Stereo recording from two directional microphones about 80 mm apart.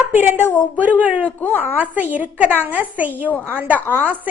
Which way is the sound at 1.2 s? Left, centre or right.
Left.